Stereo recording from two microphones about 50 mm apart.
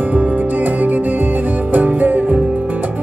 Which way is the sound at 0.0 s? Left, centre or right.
Right.